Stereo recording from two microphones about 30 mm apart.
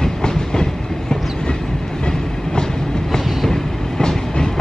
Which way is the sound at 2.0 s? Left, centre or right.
Left.